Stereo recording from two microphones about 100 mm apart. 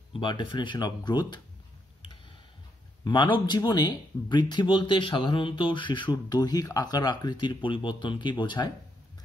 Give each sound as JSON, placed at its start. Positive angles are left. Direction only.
{"t": 0.1, "sound": "speech", "side_deg": 50}
{"t": 3.0, "sound": "speech", "side_deg": 50}